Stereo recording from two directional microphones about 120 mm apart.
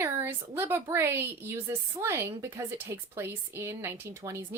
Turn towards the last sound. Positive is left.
turn(degrees=-20)  # may be behind; listen again after turning